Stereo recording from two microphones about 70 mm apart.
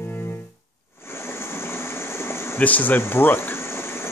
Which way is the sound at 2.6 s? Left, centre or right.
Left.